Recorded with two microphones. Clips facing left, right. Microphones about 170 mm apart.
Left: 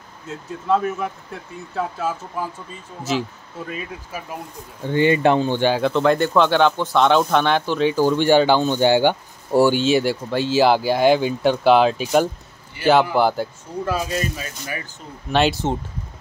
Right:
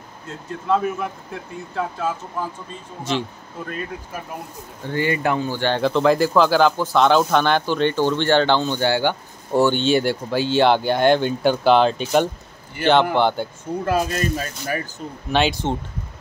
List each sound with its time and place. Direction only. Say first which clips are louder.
0.3 s speech: left 1 dB; 5° left (ahead or behind)
4.8 s speech: left 5 dB; 20° left (ahead or behind)
5.8 s speech: right 1 dB; centre (ahead or behind)
13.8 s speech: right 2 dB; 50° right (ahead or behind)
15.3 s speech: left 1 dB; centre (ahead or behind)